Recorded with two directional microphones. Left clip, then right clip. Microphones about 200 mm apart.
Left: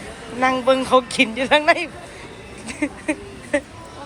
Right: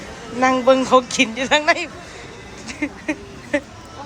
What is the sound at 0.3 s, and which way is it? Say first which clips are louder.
Speech: right 2 dB; 15° right (ahead or behind).